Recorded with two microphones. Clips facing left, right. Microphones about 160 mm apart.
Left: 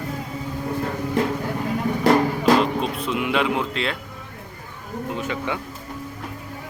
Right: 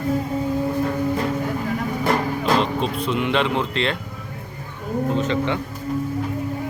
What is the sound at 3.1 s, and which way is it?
Speech, 5° left (ahead or behind).